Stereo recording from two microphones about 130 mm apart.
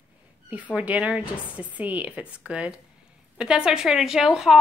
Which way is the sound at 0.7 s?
10° right (ahead or behind).